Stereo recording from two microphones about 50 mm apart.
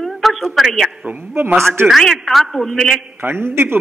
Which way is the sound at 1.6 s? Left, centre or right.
Right.